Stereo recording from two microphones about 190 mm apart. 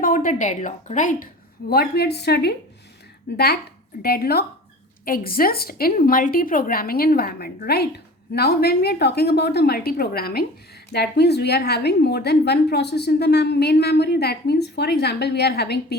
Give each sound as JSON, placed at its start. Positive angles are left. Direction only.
{"t": 0.0, "sound": "a woman's voice", "side_deg": 45}